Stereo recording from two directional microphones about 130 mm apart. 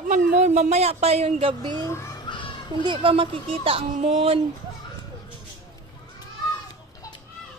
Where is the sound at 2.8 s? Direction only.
40° right (ahead or behind).